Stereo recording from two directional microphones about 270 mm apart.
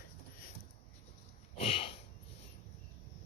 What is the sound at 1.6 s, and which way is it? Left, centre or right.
Sniff, left.